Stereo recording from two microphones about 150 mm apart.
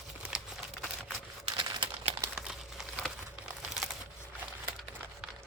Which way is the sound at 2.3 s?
5° right (ahead or behind).